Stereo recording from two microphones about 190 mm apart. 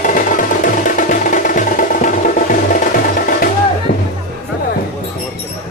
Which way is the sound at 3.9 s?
45° left (ahead or behind).